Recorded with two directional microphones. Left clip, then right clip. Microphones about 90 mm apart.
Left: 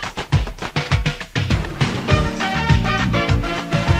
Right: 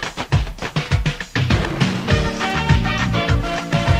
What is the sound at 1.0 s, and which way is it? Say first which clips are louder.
Music: right 1 dB; 35° right (ahead or behind).